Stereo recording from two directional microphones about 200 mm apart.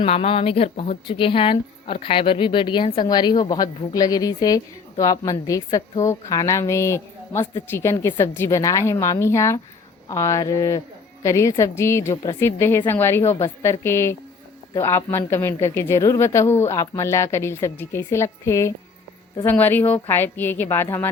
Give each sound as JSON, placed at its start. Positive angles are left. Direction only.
{"t": 0.0, "sound": "speech", "side_deg": 30}